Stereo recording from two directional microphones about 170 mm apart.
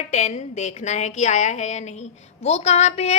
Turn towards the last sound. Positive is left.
turn(degrees=40)  # may be behind; listen again after turning